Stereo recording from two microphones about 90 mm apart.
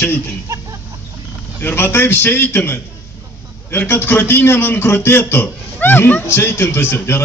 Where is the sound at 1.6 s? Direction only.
25° left (ahead or behind).